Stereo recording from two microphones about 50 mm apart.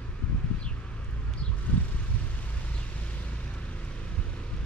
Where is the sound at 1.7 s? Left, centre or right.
Left.